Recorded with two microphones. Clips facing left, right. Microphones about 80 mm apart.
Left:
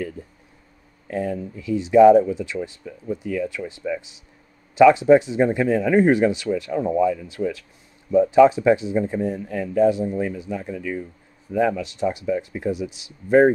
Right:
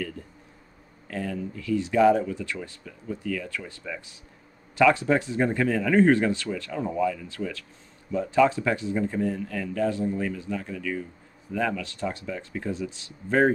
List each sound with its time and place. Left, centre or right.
1.0 s speech: left